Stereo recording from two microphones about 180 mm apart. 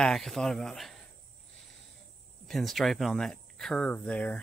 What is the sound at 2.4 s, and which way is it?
Speech, centre (ahead or behind).